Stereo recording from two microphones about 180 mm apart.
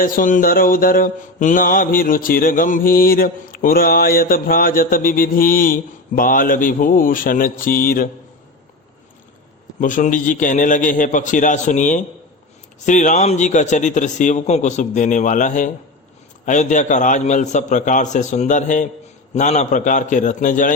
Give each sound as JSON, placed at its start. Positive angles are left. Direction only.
{"t": 0.0, "sound": "mantra", "side_deg": 50}
{"t": 9.8, "sound": "mantra", "side_deg": 45}